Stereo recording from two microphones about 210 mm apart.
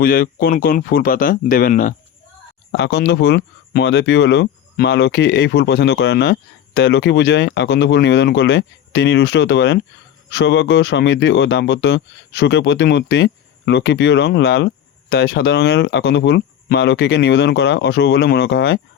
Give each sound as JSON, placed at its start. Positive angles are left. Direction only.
{"t": 0.0, "sound": "speech", "side_deg": 45}
{"t": 2.7, "sound": "speech", "side_deg": 55}